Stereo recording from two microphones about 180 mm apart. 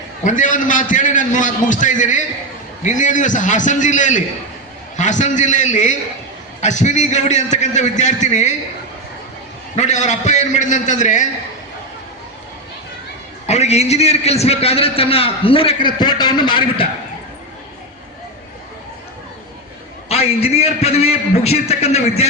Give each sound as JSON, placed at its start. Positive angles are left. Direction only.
{"t": 0.3, "sound": "a man's voice", "side_deg": 45}
{"t": 9.7, "sound": "a man's voice", "side_deg": 40}
{"t": 13.5, "sound": "a man's voice", "side_deg": 35}
{"t": 20.1, "sound": "a man's voice", "side_deg": 35}